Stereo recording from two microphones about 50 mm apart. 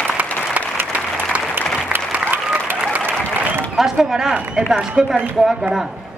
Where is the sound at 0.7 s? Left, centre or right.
Right.